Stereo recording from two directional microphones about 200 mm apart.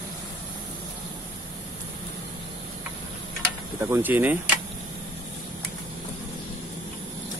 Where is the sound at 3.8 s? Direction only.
10° right (ahead or behind).